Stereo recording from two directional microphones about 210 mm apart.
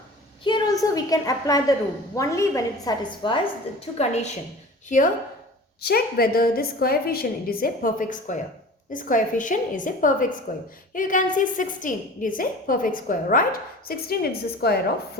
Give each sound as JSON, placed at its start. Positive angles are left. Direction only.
{"t": 0.4, "sound": "a woman's voice", "side_deg": 20}
{"t": 5.8, "sound": "a woman's voice", "side_deg": 45}